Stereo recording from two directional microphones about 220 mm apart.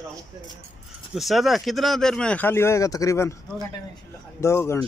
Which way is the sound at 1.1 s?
Centre (ahead or behind).